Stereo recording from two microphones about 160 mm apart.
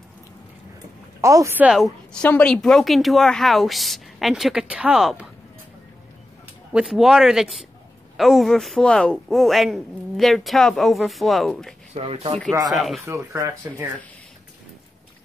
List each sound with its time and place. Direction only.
1.2 s speech: 20° right (ahead or behind)
2.2 s speech: 5° left (ahead or behind)
6.7 s speech: 5° right (ahead or behind)
11.9 s speech: 40° right (ahead or behind)
12.6 s speech: centre (ahead or behind)
13.0 s speech: 20° right (ahead or behind)